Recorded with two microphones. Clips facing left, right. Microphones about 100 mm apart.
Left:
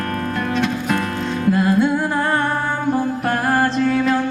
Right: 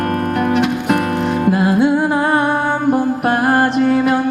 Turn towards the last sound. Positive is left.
turn(degrees=-20)  # may be behind; listen again after turning